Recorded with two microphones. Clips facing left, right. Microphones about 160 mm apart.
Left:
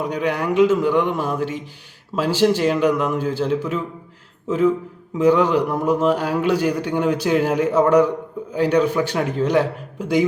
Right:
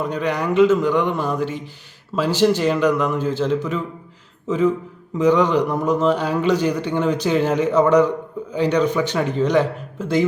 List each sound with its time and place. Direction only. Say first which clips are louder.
0.0 s a man's voice: even; 10° left (ahead or behind)